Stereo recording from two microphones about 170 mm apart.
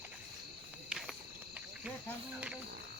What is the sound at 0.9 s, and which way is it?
Cricket, centre (ahead or behind).